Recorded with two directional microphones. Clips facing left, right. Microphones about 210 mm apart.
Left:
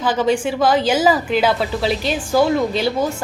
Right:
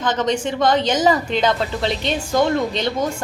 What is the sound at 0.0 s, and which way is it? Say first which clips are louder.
A woman's voice: left 3 dB; 5° left (ahead or behind).